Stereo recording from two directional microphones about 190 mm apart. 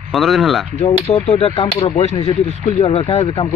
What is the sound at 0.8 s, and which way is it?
Speech, 35° left (ahead or behind).